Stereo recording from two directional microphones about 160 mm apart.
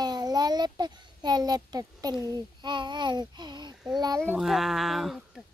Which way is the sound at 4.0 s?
25° right (ahead or behind).